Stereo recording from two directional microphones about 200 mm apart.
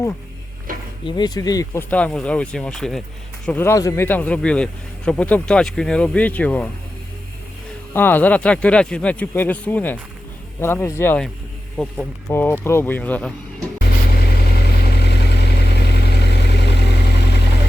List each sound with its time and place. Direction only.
0.7 s a sound: 45° right (ahead or behind)
1.0 s speech: 20° left (ahead or behind)
1.9 s speech: 5° left (ahead or behind)
7.9 s speech: 10° left (ahead or behind)
14.5 s vehicle: 50° left (ahead or behind)